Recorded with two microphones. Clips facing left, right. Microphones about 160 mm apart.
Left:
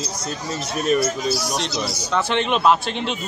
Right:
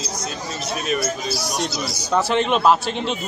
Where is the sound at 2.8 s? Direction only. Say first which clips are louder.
Right 1 dB; 40° right (ahead or behind).